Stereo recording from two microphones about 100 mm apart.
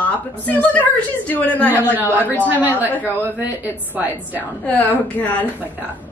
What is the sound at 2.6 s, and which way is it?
A woman's voice, 15° right (ahead or behind).